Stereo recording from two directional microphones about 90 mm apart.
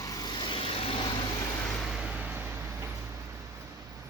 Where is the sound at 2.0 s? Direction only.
10° right (ahead or behind).